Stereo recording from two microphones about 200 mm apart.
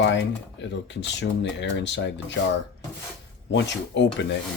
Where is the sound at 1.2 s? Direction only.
60° left (ahead or behind).